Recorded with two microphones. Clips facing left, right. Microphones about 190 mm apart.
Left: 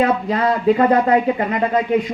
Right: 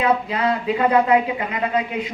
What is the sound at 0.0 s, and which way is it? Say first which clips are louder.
A man's voice: left 3 dB; 50° left (ahead or behind).